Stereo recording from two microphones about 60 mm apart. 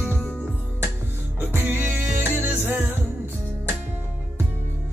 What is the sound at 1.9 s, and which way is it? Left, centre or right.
Music, right.